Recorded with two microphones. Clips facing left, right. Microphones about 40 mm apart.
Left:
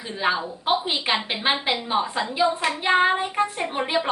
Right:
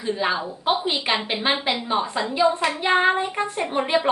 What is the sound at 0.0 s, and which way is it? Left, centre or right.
A woman's voice, centre.